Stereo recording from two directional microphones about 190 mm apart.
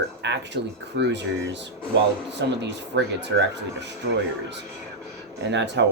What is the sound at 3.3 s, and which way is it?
Speech, 90° right.